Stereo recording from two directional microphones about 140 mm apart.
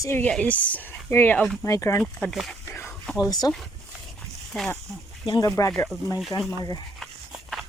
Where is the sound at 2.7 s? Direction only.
15° left (ahead or behind).